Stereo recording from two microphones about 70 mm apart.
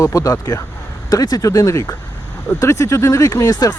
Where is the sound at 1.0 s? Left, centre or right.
Left.